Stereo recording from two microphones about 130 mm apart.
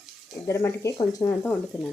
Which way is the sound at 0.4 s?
20° left (ahead or behind).